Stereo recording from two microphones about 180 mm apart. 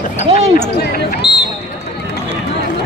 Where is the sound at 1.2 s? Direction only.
25° left (ahead or behind).